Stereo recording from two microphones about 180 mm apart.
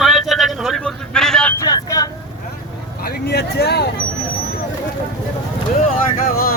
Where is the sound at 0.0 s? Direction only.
Centre (ahead or behind).